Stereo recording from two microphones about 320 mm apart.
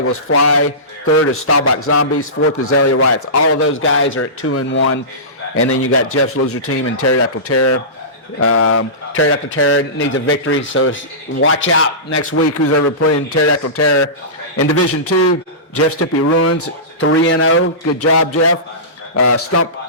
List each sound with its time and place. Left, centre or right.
0.0 s a man's voice: left